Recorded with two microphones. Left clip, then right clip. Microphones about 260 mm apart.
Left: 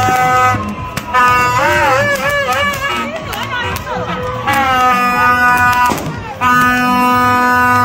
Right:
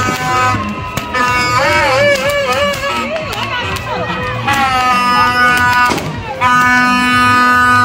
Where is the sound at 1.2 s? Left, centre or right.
Centre.